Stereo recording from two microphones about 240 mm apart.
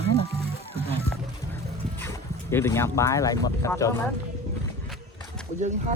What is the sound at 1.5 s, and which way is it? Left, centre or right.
Music, centre.